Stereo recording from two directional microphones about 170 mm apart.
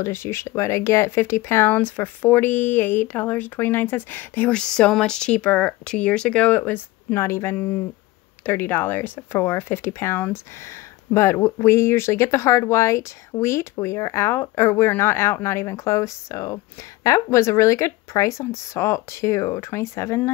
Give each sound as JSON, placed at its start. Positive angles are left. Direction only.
{"t": 0.0, "sound": "speech", "side_deg": 15}